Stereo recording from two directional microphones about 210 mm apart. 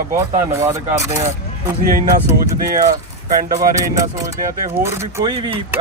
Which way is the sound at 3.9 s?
15° right (ahead or behind).